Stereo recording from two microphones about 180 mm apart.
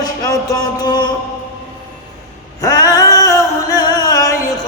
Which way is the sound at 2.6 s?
20° left (ahead or behind).